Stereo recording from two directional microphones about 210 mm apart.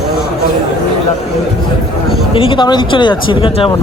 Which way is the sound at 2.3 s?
25° left (ahead or behind).